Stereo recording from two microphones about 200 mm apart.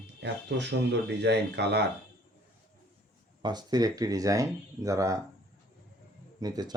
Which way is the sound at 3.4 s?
20° right (ahead or behind).